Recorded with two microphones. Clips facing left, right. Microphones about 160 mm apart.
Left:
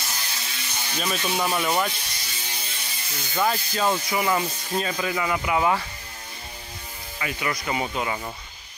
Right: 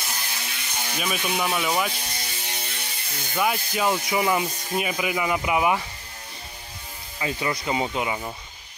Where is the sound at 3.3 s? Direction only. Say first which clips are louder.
Even; 10° right (ahead or behind).